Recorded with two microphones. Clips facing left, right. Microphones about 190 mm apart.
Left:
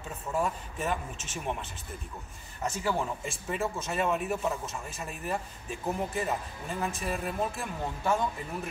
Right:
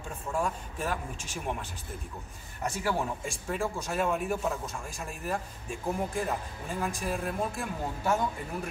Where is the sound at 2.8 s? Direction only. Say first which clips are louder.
Even; centre (ahead or behind).